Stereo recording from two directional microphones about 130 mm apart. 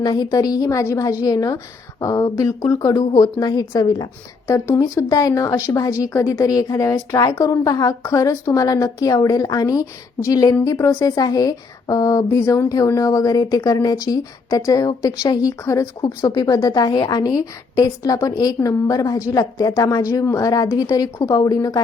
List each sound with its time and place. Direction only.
0.0 s a woman's voice: 30° left (ahead or behind)